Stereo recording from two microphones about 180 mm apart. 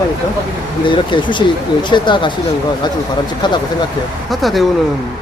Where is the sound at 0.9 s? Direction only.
25° left (ahead or behind).